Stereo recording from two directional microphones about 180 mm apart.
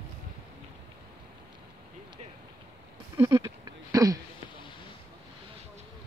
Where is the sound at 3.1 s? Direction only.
20° right (ahead or behind).